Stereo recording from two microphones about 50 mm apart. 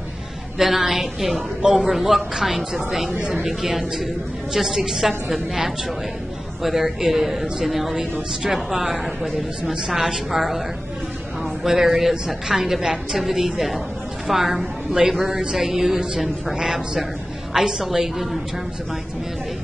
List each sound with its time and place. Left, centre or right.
0.6 s a woman's voice: centre
3.1 s a woman's voice: centre
3.4 s a woman's voice: centre
11.6 s a woman's voice: centre